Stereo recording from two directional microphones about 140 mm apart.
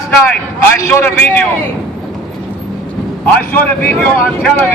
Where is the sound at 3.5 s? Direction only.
15° left (ahead or behind).